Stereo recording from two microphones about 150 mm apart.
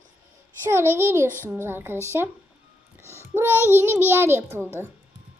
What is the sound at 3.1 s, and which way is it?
A child's voice, 15° right (ahead or behind).